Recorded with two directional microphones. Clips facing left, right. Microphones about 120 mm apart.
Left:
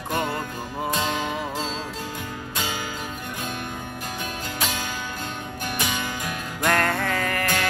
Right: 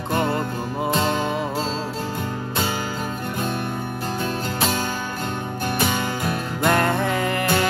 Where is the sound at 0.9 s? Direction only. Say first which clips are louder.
Right 5 dB; 40° right (ahead or behind).